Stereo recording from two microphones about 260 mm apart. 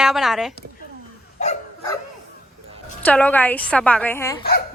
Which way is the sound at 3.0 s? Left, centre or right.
Centre.